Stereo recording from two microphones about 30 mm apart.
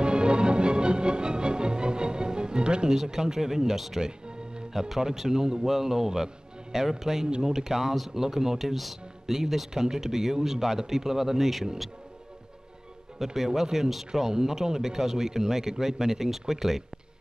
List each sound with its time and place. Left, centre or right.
0.0 s music: right
2.9 s a man's voice: centre
7.9 s speech: centre
8.2 s a man's voice: centre
13.2 s a man's voice: centre
14.3 s a man's voice: centre